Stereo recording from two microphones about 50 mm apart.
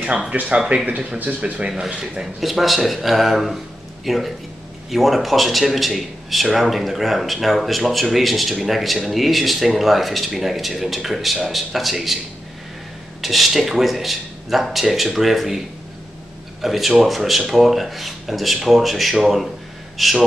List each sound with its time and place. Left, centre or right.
0.3 s speech: right
1.7 s speech: centre
2.4 s a man's voice: centre
13.2 s a man's voice: centre
16.6 s a man's voice: centre